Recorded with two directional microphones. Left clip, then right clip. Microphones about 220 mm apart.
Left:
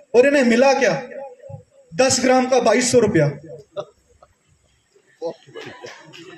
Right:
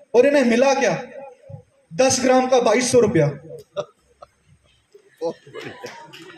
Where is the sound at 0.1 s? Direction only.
45° left (ahead or behind).